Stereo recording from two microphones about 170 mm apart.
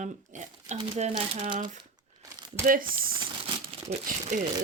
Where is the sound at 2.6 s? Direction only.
55° right (ahead or behind).